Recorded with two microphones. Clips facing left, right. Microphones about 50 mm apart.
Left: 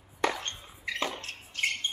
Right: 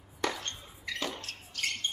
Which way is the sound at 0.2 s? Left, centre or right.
Left.